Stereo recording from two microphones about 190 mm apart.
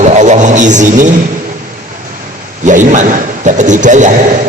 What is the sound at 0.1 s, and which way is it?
Music, 40° right (ahead or behind).